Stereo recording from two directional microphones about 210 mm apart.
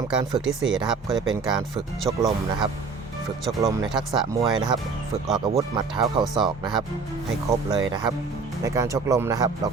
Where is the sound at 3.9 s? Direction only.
Centre (ahead or behind).